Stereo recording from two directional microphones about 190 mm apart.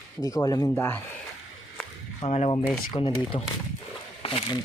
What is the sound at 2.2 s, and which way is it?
Speech, 35° left (ahead or behind).